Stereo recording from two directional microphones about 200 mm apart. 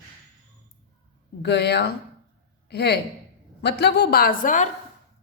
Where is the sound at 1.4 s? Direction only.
55° left (ahead or behind).